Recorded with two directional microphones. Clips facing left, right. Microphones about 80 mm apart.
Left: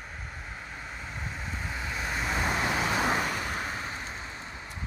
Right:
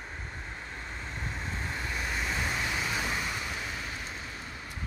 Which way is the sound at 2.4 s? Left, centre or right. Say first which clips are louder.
Left 4 dB; left.